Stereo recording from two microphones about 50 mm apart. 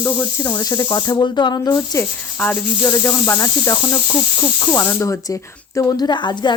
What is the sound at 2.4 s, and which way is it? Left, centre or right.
Speech, left.